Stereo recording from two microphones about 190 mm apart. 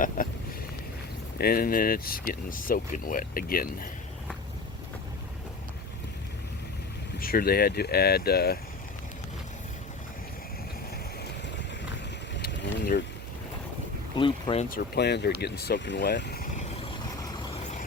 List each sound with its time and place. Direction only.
0.2 s a sound: 45° left (ahead or behind)
1.4 s speech: 50° left (ahead or behind)
7.2 s speech: 50° left (ahead or behind)
12.4 s a sound: 55° left (ahead or behind)
14.2 s speech: 25° left (ahead or behind)
14.7 s speech: 60° left (ahead or behind)
16.8 s vehicle: 30° left (ahead or behind)